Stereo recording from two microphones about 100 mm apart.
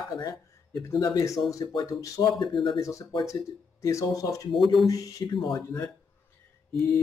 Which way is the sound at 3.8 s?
30° left (ahead or behind).